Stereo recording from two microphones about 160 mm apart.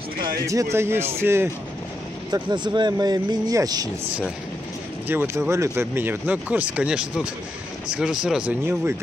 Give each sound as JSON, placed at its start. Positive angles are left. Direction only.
{"t": 0.5, "sound": "speech", "side_deg": -20}
{"t": 2.3, "sound": "speech", "side_deg": -30}
{"t": 5.0, "sound": "speech", "side_deg": -15}